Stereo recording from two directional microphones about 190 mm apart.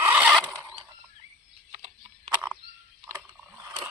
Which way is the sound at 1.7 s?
40° right (ahead or behind).